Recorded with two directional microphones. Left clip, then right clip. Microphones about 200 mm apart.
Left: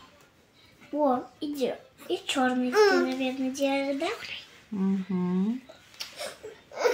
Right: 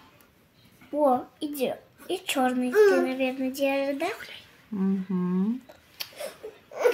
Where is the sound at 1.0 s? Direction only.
50° right (ahead or behind).